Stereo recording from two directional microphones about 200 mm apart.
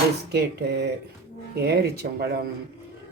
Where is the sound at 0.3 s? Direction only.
55° right (ahead or behind).